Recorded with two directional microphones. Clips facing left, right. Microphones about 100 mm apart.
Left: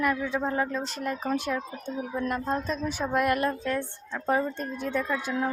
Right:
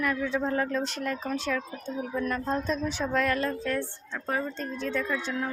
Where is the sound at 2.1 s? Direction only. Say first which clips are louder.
Even; 20° left (ahead or behind).